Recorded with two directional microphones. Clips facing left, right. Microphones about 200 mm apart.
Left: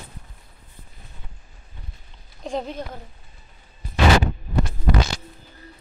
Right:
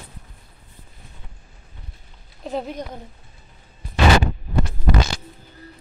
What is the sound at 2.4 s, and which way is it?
Speech, 5° right (ahead or behind).